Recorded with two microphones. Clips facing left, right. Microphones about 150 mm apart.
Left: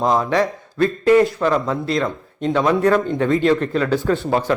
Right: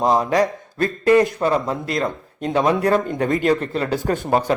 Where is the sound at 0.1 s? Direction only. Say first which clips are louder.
Even; 40° right (ahead or behind).